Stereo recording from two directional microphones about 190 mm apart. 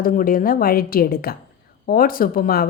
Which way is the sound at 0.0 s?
45° left (ahead or behind).